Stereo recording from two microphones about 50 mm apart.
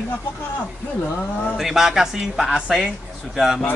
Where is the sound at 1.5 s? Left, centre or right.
Centre.